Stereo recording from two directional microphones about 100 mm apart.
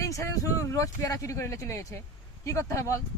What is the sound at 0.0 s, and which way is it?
Speech, 30° left (ahead or behind).